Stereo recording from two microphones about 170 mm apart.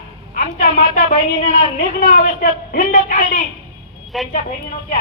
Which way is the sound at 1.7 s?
55° left (ahead or behind).